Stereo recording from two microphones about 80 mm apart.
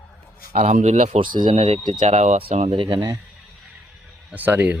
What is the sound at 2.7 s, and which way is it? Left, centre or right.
Speech, right.